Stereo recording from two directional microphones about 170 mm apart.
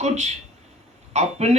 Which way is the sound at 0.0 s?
40° right (ahead or behind).